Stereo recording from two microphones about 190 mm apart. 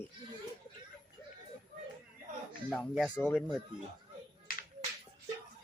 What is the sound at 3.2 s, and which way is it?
Speech, 5° left (ahead or behind).